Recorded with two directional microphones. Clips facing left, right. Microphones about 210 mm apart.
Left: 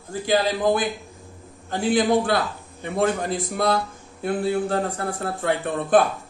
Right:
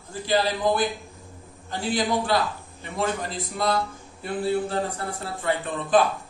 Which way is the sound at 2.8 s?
55° left (ahead or behind).